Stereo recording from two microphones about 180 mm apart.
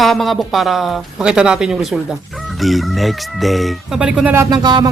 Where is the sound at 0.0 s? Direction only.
Centre (ahead or behind).